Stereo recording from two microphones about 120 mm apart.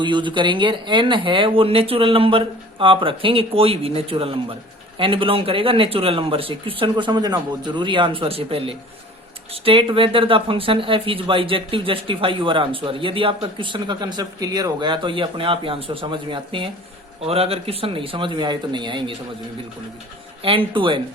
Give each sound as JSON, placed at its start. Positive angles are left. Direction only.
{"t": 0.0, "sound": "speech", "side_deg": -40}
{"t": 17.2, "sound": "speech", "side_deg": -55}
{"t": 20.4, "sound": "speech", "side_deg": -50}